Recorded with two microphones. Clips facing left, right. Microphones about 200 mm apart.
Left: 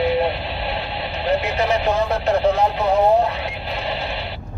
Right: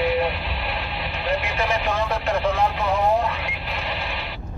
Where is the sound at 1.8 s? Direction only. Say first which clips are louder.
Left 5 dB; 40° left (ahead or behind).